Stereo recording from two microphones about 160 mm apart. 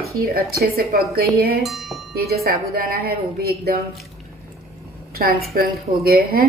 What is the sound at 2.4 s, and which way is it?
A woman's voice, 70° right (ahead or behind).